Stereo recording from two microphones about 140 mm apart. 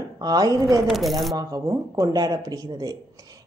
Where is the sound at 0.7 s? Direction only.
Centre (ahead or behind).